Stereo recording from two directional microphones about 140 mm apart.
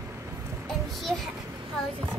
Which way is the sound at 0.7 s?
Centre (ahead or behind).